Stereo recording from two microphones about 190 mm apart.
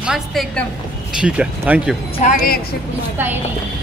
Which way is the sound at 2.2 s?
40° left (ahead or behind).